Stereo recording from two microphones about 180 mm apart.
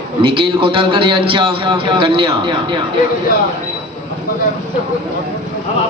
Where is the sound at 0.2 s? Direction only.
30° right (ahead or behind).